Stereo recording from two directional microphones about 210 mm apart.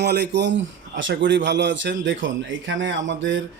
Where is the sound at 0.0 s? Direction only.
50° right (ahead or behind).